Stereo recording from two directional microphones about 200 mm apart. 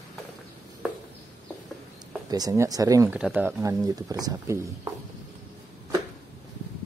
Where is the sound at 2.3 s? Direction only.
15° right (ahead or behind).